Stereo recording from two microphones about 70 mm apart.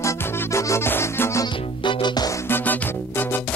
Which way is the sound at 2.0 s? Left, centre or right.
Left.